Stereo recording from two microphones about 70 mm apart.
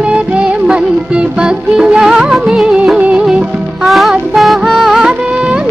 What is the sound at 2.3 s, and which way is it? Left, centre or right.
Music of bollywood, centre.